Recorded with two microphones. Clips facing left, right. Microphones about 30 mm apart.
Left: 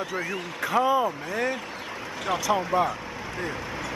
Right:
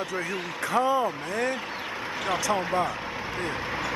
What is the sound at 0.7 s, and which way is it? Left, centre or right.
Speech, centre.